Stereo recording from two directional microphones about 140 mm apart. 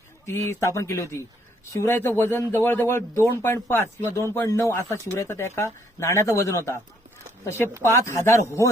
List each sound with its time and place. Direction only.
0.3 s a man's voice: 20° left (ahead or behind)
7.8 s a man's voice: 20° left (ahead or behind)